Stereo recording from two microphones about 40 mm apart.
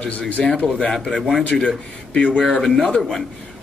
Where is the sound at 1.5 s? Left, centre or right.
Left.